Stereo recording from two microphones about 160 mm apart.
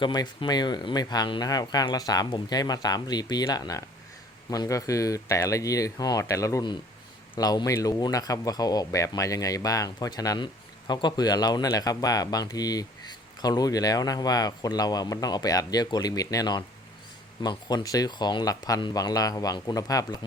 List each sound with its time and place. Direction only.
0.0 s speech: 30° left (ahead or behind)